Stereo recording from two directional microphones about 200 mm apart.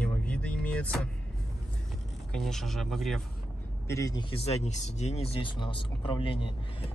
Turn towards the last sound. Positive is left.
turn(degrees=25)  # may be behind; listen again after turning